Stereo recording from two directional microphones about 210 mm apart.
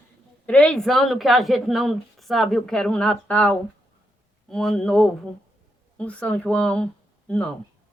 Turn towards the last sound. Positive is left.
turn(degrees=5)  # may be behind; listen again after turning